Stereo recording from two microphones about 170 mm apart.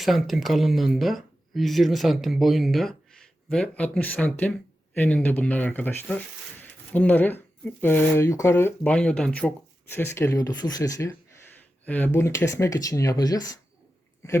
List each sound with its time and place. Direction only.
0.0 s speech: centre (ahead or behind); by 13.5 s 20° left (ahead or behind)